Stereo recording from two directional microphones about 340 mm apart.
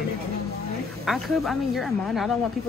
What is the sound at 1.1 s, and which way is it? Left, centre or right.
Speech, centre.